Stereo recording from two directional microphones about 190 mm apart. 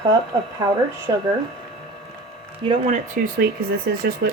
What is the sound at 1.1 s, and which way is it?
Speech, 20° right (ahead or behind).